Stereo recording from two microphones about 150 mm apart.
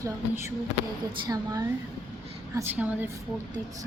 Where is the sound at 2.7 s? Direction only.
10° right (ahead or behind).